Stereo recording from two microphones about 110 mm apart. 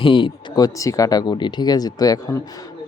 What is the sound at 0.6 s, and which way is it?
Speech, 30° left (ahead or behind).